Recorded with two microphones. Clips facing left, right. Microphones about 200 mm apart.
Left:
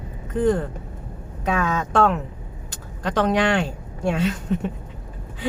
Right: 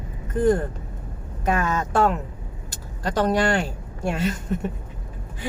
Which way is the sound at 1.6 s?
10° right (ahead or behind).